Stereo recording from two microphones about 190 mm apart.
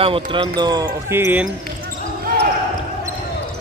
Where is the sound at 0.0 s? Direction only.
25° right (ahead or behind); by 1.5 s 10° right (ahead or behind).